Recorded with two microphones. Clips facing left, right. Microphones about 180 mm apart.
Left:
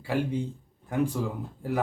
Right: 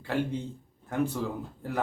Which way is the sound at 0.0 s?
10° left (ahead or behind).